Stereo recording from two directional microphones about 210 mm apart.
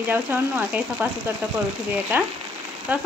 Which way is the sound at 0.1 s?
10° right (ahead or behind).